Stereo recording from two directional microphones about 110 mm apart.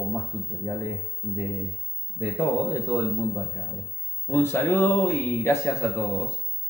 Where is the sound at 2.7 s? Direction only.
25° left (ahead or behind).